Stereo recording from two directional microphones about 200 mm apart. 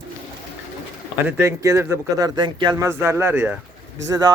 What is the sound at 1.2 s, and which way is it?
Speech, 15° right (ahead or behind).